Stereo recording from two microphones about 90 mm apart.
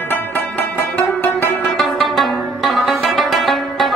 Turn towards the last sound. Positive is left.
turn(degrees=0)  # may be behind; listen again after turning